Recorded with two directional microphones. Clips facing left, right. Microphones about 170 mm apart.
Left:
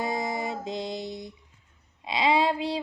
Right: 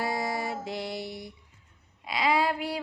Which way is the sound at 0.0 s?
20° left (ahead or behind).